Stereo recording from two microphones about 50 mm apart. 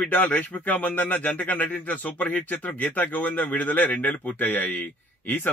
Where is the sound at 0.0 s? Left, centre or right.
Left.